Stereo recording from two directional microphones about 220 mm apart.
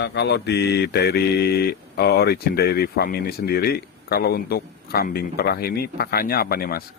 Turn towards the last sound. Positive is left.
turn(degrees=45)  # may be behind; listen again after turning